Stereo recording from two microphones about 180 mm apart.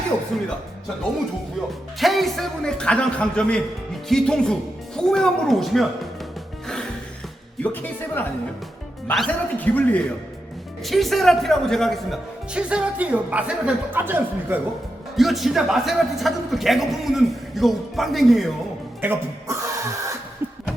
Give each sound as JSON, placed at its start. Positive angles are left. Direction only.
{"t": 2.0, "sound": "a man's voice", "side_deg": 0}
{"t": 7.6, "sound": "a man's voice", "side_deg": 10}
{"t": 15.1, "sound": "a man's voice", "side_deg": 0}
{"t": 19.0, "sound": "throat clearing", "side_deg": -15}